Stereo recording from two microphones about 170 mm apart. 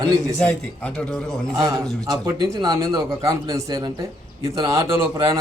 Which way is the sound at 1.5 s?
20° right (ahead or behind).